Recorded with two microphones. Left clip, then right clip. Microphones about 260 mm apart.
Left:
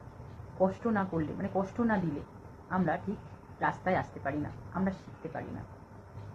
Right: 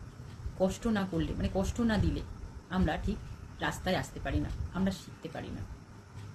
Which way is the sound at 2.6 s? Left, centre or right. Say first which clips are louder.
Left 2 dB; right.